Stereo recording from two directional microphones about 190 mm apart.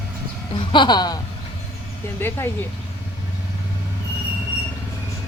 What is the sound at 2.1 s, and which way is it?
Speech, 15° left (ahead or behind).